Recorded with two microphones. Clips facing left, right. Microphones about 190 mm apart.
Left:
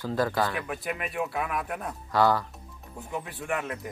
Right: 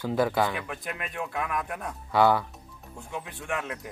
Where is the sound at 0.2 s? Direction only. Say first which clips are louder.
Right 2 dB; 20° right (ahead or behind).